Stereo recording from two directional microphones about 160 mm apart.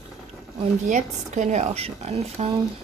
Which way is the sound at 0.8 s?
50° right (ahead or behind).